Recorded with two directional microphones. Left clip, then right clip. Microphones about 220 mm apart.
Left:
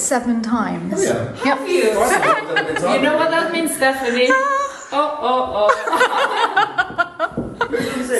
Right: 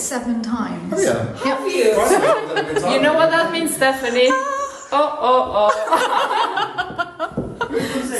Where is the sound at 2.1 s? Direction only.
30° right (ahead or behind).